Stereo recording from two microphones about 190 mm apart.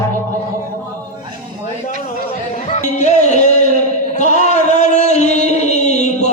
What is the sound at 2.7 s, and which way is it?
Music, 40° left (ahead or behind).